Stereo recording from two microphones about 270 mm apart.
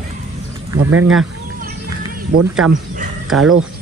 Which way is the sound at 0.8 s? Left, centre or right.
Right.